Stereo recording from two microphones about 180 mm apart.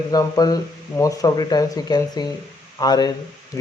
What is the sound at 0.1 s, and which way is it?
Speech, 20° left (ahead or behind).